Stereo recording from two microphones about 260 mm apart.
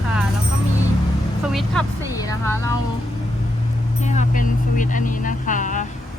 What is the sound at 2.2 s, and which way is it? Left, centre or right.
Speech, centre.